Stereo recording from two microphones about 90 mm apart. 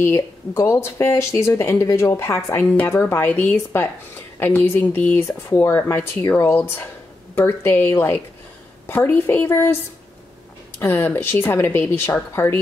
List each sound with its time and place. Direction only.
0.0 s speech: 30° left (ahead or behind)
10.8 s speech: 20° left (ahead or behind)